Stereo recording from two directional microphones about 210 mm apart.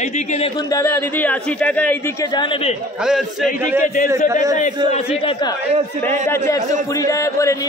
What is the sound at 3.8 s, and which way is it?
Speech, 40° left (ahead or behind).